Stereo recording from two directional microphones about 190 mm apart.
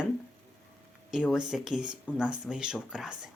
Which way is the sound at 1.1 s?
Centre (ahead or behind).